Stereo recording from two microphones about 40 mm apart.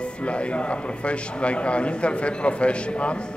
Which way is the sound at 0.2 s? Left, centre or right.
Left.